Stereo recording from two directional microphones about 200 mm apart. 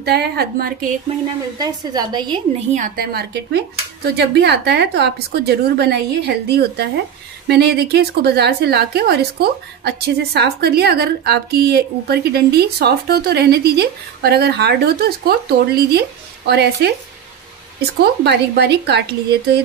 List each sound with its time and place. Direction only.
0.0 s a woman's voice: 55° right (ahead or behind)
1.6 s a woman's voice: 20° right (ahead or behind)
2.7 s a woman's voice: 45° right (ahead or behind)